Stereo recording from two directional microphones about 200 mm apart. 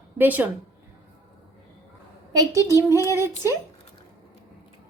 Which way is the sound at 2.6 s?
15° right (ahead or behind).